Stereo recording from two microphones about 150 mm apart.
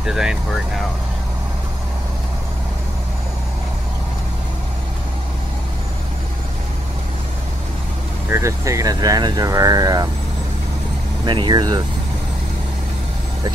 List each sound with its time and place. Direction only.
0.0 s speech: 5° right (ahead or behind)
8.3 s speech: 20° right (ahead or behind)
11.2 s speech: 30° right (ahead or behind)